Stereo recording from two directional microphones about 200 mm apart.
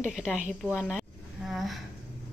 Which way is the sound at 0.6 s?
5° right (ahead or behind).